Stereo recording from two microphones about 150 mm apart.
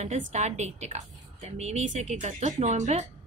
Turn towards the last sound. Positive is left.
turn(degrees=-50)  # may be behind; listen again after turning